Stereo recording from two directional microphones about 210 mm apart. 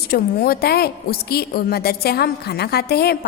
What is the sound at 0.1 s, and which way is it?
A woman's voice, 45° left (ahead or behind).